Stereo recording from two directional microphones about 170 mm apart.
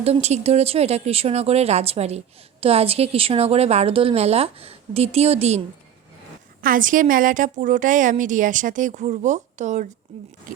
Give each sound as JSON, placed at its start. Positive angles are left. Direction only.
{"t": 0.0, "sound": "speech", "side_deg": -40}
{"t": 6.6, "sound": "a woman's voice", "side_deg": -55}